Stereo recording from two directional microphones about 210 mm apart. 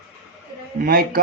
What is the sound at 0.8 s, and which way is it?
Speech, 45° right (ahead or behind).